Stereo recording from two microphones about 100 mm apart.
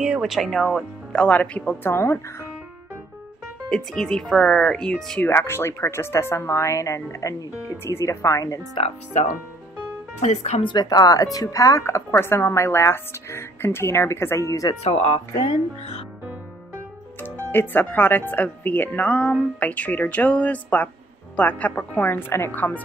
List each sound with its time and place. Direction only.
0.0 s speech: 5° right (ahead or behind); by 1.9 s 10° left (ahead or behind)
1.9 s a woman's voice: 25° left (ahead or behind)
3.7 s speech: 5° left (ahead or behind)
5.2 s a woman's voice: 25° left (ahead or behind)
8.8 s speech: 75° left (ahead or behind)
10.6 s a woman's voice: 45° left (ahead or behind)
14.8 s speech: 90° left
17.5 s speech: 20° left (ahead or behind)